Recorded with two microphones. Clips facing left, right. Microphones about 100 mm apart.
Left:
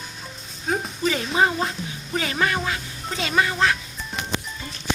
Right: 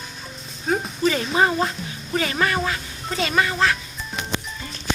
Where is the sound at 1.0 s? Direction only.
10° left (ahead or behind).